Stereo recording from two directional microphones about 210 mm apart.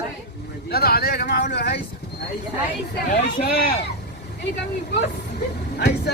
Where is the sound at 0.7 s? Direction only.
45° left (ahead or behind).